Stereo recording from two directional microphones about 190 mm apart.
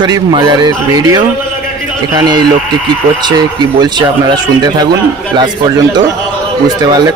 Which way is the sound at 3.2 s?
20° right (ahead or behind).